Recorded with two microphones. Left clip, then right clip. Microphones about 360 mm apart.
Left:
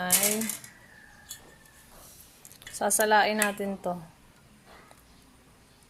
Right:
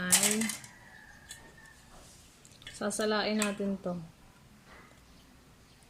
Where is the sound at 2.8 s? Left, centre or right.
Centre.